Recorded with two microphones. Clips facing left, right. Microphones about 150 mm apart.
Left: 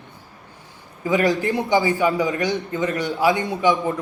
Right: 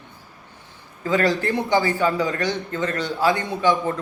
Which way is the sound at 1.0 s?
15° left (ahead or behind).